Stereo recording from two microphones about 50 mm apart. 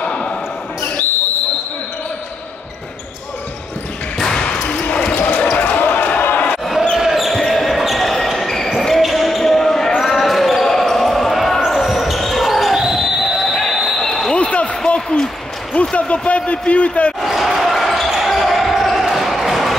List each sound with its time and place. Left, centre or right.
0.0 s basketball bounce: centre
4.2 s basketball bounce: centre
5.1 s basketball bounce: left
7.0 s basketball bounce: centre
14.3 s basketball bounce: left
15.0 s a sound: centre
15.7 s basketball bounce: left
17.2 s basketball bounce: centre